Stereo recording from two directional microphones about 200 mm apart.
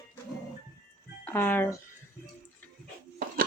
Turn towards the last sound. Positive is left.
turn(degrees=-45)  # may be behind; listen again after turning